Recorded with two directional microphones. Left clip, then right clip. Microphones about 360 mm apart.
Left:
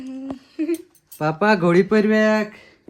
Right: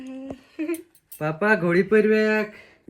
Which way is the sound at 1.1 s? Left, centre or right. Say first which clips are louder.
Left 3 dB; centre.